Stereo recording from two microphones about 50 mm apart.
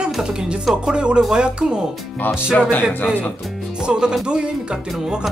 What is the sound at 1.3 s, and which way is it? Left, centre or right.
Speech, centre.